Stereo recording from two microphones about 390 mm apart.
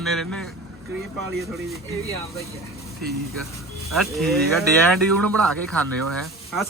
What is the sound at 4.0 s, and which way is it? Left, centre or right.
Speech, centre.